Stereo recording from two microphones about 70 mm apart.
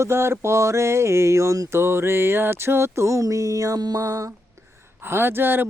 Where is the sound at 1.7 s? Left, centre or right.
Right.